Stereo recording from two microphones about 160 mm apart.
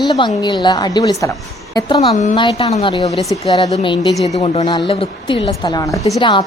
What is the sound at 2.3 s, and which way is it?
A woman's voice, 30° left (ahead or behind).